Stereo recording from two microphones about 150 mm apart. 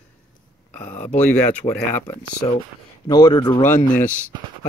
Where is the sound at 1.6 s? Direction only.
50° left (ahead or behind).